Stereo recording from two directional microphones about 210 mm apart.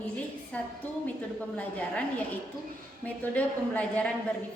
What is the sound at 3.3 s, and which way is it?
Speech, 5° left (ahead or behind).